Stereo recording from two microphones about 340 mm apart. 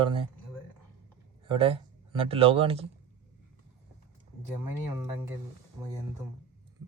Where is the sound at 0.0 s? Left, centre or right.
Centre.